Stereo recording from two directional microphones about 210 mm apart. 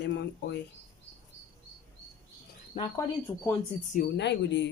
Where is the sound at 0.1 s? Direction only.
55° left (ahead or behind).